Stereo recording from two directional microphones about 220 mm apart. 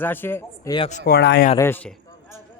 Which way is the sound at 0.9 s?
40° left (ahead or behind).